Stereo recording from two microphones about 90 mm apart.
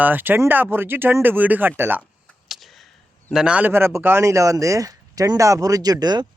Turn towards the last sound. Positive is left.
turn(degrees=-50)  # may be behind; listen again after turning